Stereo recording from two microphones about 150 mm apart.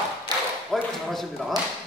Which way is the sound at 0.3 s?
25° right (ahead or behind).